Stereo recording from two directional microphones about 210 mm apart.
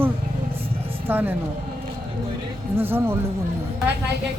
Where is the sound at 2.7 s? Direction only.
10° right (ahead or behind).